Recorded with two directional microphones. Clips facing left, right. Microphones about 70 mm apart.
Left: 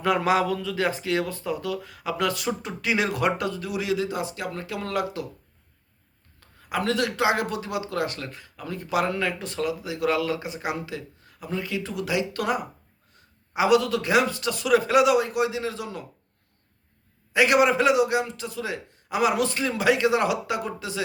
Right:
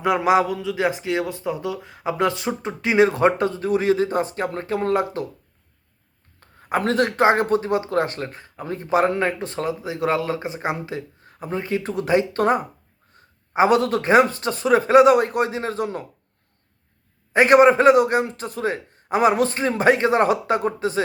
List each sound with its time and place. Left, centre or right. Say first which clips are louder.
0.0 s speech: right 4 dB; centre
6.4 s a man's voice: right 5 dB; right
13.2 s a sound: right 5 dB; right
13.5 s a man's voice: right 3 dB; right
17.3 s a man's voice: right 6 dB; right